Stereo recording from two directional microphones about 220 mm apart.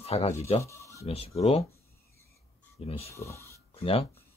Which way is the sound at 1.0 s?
25° left (ahead or behind).